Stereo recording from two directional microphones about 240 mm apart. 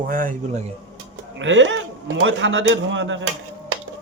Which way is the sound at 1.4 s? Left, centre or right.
Right.